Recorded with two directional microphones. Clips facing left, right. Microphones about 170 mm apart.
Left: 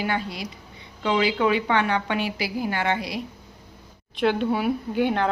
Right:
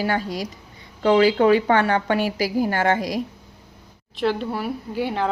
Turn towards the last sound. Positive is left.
turn(degrees=-5)  # may be behind; listen again after turning